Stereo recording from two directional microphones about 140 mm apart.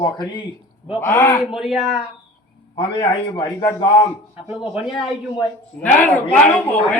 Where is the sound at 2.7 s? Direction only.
35° left (ahead or behind).